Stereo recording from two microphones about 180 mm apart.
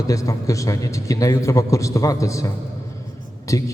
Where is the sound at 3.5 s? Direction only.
15° left (ahead or behind).